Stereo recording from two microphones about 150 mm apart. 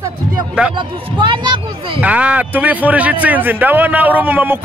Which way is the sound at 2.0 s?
10° right (ahead or behind).